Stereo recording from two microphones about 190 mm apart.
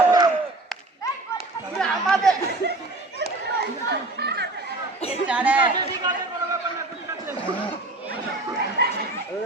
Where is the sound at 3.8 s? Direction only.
60° right (ahead or behind).